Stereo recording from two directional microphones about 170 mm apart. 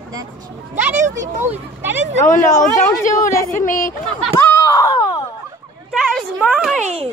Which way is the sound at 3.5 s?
50° left (ahead or behind).